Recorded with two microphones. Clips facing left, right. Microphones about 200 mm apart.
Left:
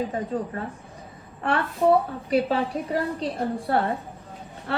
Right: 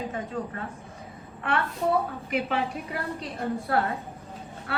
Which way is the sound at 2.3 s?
35° left (ahead or behind).